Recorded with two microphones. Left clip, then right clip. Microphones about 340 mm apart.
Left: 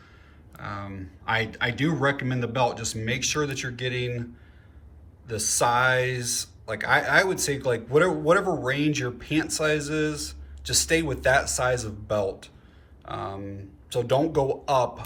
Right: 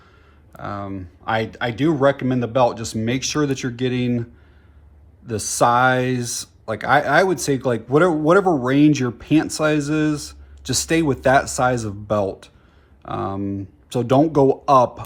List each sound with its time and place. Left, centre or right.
0.5 s speech: centre